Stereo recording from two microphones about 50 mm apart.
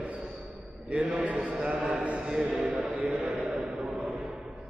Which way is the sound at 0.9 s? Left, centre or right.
Right.